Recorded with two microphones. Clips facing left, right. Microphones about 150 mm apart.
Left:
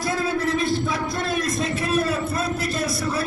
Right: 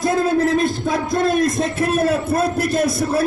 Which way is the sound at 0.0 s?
45° right (ahead or behind).